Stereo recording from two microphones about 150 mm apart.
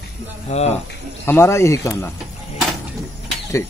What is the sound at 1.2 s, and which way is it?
Speech, 15° left (ahead or behind).